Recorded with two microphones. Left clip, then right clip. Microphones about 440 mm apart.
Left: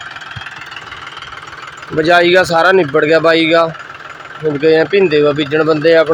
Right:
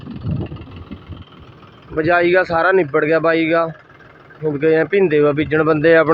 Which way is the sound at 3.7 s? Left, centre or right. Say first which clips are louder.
Left 13 dB; right.